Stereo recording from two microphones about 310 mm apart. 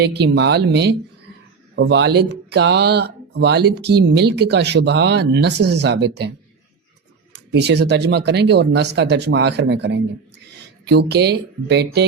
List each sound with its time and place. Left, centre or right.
0.0 s speech: right
7.5 s speech: right